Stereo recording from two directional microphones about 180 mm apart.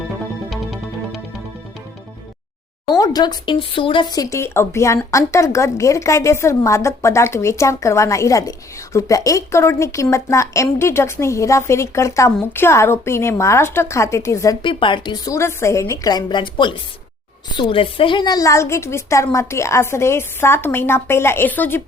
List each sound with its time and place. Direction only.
0.5 s music: centre (ahead or behind)
2.9 s speech: 20° left (ahead or behind)
14.6 s a woman's voice: 30° left (ahead or behind); by 21.8 s 10° left (ahead or behind)